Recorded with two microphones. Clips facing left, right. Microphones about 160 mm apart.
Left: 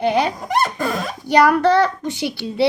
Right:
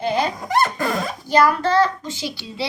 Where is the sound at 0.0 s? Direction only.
65° left (ahead or behind).